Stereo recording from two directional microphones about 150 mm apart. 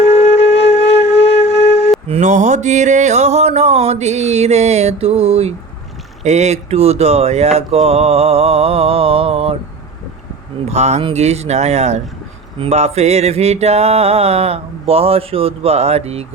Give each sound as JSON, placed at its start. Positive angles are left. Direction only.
{"t": 0.0, "sound": "music", "side_deg": 45}
{"t": 2.0, "sound": "mantra", "side_deg": -50}
{"t": 10.7, "sound": "mantra", "side_deg": -45}